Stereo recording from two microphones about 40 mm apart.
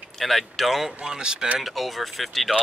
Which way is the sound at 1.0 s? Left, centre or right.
Right.